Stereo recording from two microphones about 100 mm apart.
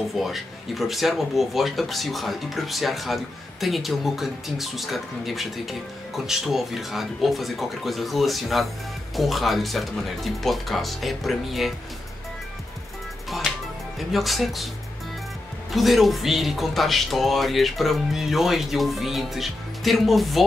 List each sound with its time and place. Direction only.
0.1 s speech: centre (ahead or behind)
13.9 s speech: centre (ahead or behind)
15.7 s speech: centre (ahead or behind)